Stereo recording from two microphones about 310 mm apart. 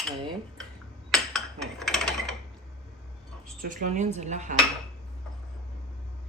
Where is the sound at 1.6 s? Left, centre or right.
Centre.